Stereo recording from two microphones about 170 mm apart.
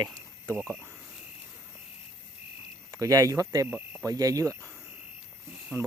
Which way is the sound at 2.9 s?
20° right (ahead or behind).